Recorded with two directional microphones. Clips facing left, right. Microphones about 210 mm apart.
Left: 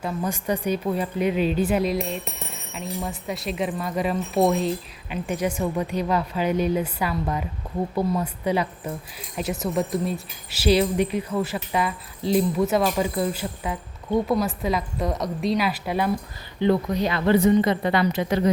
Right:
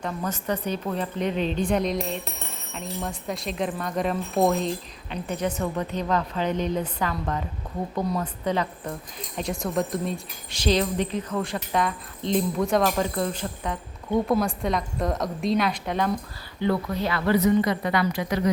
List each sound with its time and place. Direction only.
0.0 s a woman's voice: 10° left (ahead or behind)
16.6 s a woman's voice: 20° left (ahead or behind)